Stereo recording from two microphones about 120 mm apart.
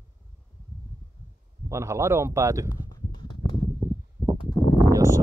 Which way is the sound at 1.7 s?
25° right (ahead or behind).